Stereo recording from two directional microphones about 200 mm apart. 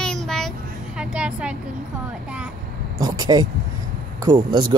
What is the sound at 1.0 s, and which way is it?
Speech, 5° right (ahead or behind).